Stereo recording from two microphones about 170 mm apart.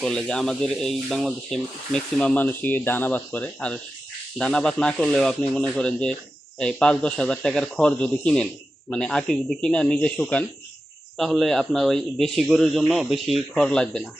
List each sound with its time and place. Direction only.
0.0 s speech: 5° left (ahead or behind)